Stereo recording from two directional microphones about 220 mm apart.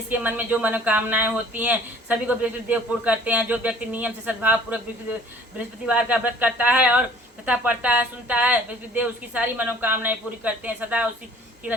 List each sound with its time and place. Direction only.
0.1 s speech: 10° right (ahead or behind)